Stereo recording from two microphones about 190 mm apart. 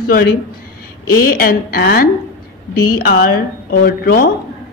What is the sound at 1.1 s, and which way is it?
Speech, 50° left (ahead or behind).